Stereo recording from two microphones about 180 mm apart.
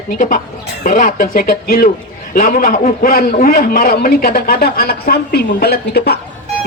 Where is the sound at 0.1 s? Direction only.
45° left (ahead or behind).